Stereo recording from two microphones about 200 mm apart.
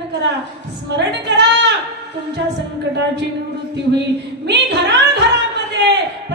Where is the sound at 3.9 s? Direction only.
60° right (ahead or behind).